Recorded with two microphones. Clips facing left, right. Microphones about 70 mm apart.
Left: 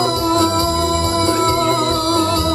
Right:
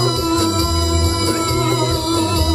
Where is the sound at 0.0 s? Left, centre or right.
Left.